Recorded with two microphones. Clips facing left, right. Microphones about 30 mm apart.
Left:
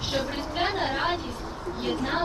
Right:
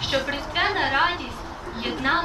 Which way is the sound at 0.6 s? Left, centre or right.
Right.